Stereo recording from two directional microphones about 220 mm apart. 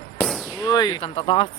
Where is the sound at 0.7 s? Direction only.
20° left (ahead or behind).